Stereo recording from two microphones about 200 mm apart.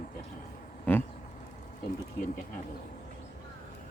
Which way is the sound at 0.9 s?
10° left (ahead or behind).